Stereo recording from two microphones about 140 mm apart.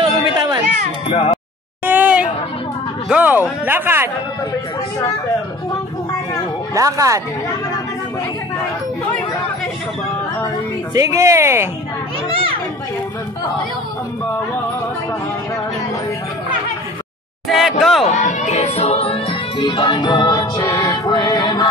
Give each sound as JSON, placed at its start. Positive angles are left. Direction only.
{"t": 0.4, "sound": "music", "side_deg": -30}
{"t": 1.0, "sound": "speech", "side_deg": 50}
{"t": 1.9, "sound": "a sound", "side_deg": -10}
{"t": 3.1, "sound": "speech", "side_deg": -10}
{"t": 6.7, "sound": "speech", "side_deg": -25}
{"t": 11.0, "sound": "speech", "side_deg": -20}
{"t": 17.5, "sound": "speech", "side_deg": 0}
{"t": 18.1, "sound": "music", "side_deg": 60}
{"t": 19.6, "sound": "music", "side_deg": 35}